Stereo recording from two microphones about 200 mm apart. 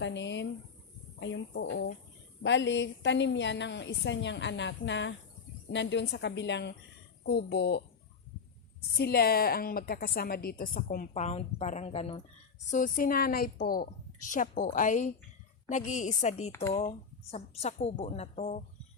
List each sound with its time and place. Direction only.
0.0 s a sound: 65° left (ahead or behind)
1.2 s a woman's voice: 65° left (ahead or behind)
9.0 s a woman's voice: 50° left (ahead or behind)
11.1 s a woman's voice: 35° left (ahead or behind)
12.7 s a woman's voice: 45° left (ahead or behind)